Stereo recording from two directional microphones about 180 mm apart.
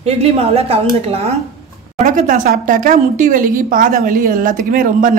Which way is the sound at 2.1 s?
45° right (ahead or behind).